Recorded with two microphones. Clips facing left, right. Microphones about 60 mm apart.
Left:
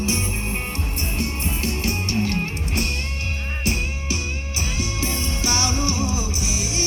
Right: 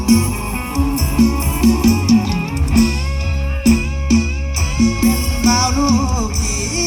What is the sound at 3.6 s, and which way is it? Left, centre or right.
Music, right.